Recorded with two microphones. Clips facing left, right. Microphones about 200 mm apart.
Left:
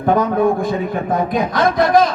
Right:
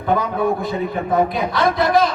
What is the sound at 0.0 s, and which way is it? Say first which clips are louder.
A man's voice: left 4 dB; 50° left (ahead or behind).